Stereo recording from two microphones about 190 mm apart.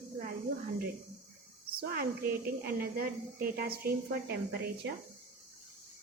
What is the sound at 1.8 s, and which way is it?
A woman's voice, 50° right (ahead or behind).